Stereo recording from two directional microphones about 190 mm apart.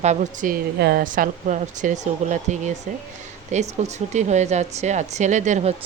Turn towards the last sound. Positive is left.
turn(degrees=-35)  # may be behind; listen again after turning